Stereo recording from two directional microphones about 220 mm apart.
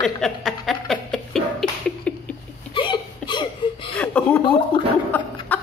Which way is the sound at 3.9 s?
5° left (ahead or behind).